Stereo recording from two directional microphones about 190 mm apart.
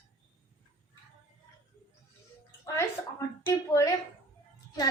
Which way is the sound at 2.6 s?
15° left (ahead or behind).